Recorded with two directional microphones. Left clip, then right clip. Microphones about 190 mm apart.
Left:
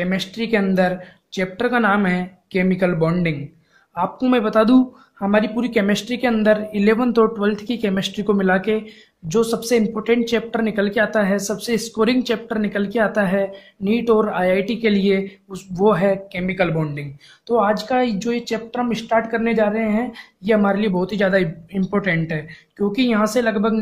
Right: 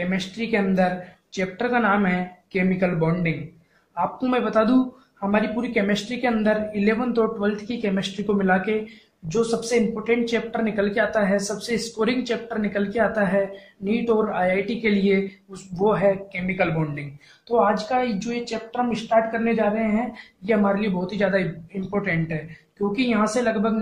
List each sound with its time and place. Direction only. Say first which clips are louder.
0.0 s a woman's voice: left 4 dB; 50° left (ahead or behind)